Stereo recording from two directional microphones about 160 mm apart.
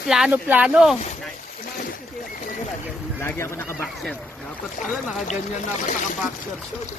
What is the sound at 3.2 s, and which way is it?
Speech, 15° left (ahead or behind).